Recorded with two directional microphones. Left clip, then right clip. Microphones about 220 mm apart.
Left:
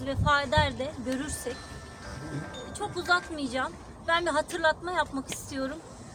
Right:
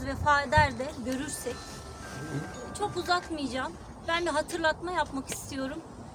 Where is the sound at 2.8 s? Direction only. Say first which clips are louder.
Left 2 dB; 10° right (ahead or behind).